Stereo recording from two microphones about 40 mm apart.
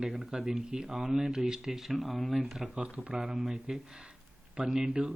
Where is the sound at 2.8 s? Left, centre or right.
Right.